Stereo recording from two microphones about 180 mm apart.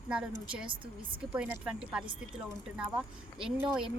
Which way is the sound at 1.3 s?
5° right (ahead or behind).